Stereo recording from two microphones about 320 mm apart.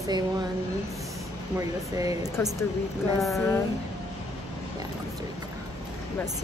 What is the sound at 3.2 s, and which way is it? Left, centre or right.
Speech, centre.